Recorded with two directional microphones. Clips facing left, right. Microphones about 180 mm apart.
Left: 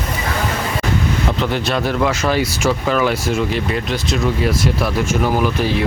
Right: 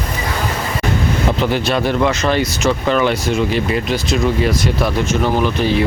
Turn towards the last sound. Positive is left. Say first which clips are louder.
# right 2 dB
turn(degrees=5)  # may be behind; listen again after turning